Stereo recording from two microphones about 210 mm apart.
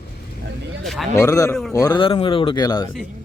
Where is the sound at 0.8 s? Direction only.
Centre (ahead or behind).